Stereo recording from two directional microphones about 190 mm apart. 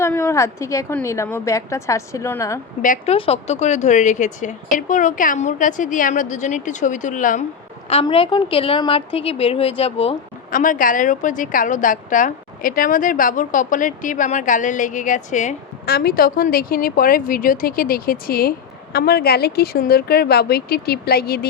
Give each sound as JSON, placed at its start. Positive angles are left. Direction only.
{"t": 0.0, "sound": "a woman's voice", "side_deg": 15}
{"t": 2.8, "sound": "a woman's voice", "side_deg": 45}
{"t": 3.2, "sound": "speech", "side_deg": 30}
{"t": 8.0, "sound": "a woman's voice", "side_deg": 25}
{"t": 10.5, "sound": "a woman's voice", "side_deg": 45}
{"t": 15.9, "sound": "a woman's voice", "side_deg": 55}